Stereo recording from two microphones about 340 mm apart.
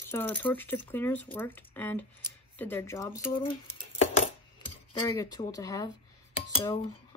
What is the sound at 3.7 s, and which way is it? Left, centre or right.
Dishes, centre.